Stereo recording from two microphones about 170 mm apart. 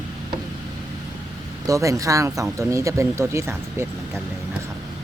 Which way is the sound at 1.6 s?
20° right (ahead or behind).